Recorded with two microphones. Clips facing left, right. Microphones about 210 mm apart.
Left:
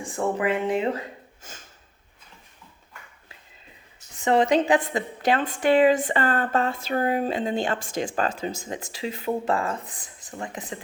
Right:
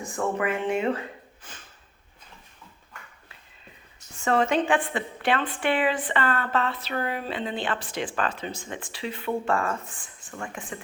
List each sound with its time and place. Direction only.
0.0 s a woman's voice: 30° left (ahead or behind)
1.4 s speech: 45° left (ahead or behind)
4.2 s a woman's voice: 20° left (ahead or behind)
4.7 s a woman's voice: 40° left (ahead or behind)
9.2 s speech: 20° left (ahead or behind)
10.0 s a sound: 40° left (ahead or behind)
10.3 s speech: 20° left (ahead or behind)